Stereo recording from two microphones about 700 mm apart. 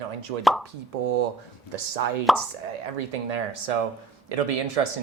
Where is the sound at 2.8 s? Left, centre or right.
Right.